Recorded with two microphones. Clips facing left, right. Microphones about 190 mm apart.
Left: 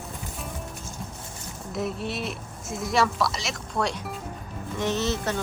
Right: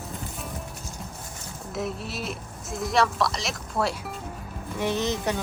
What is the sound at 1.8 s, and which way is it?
A woman's voice, centre (ahead or behind).